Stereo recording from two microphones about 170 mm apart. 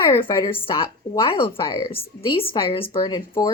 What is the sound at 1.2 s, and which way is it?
Speech, 30° left (ahead or behind).